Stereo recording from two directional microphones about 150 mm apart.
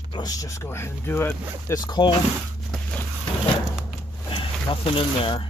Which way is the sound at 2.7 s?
5° left (ahead or behind).